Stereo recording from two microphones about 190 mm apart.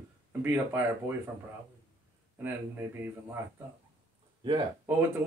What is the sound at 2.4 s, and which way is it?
Speech, 10° right (ahead or behind).